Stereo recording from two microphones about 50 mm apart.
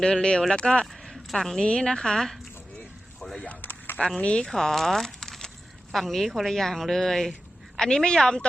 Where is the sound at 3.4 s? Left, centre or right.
Left.